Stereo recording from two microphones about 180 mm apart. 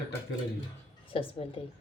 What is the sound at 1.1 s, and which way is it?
Speech, 30° left (ahead or behind).